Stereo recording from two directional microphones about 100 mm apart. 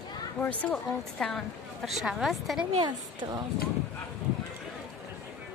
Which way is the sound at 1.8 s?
5° right (ahead or behind).